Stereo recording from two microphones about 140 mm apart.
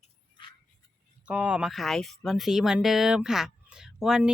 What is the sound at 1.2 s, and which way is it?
Speech, 10° right (ahead or behind).